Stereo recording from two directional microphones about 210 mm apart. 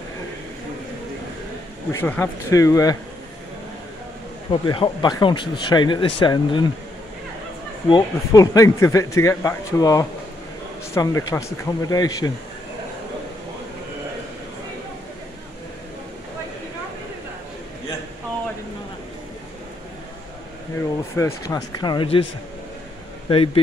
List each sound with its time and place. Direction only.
1.9 s speech: 10° left (ahead or behind)
4.5 s speech: 20° left (ahead or behind)
7.9 s speech: 15° left (ahead or behind)
21.2 s speech: 15° left (ahead or behind)
23.2 s speech: 25° left (ahead or behind)